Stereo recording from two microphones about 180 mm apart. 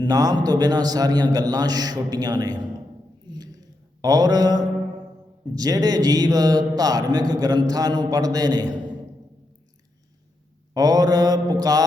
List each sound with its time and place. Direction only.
0.0 s speech: 20° right (ahead or behind)
3.2 s a sound: 20° right (ahead or behind)
4.0 s speech: 20° right (ahead or behind)
10.8 s speech: 20° right (ahead or behind)